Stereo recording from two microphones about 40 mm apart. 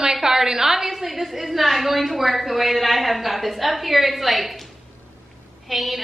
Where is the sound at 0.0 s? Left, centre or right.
Centre.